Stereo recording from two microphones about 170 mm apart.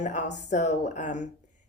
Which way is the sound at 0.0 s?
45° left (ahead or behind).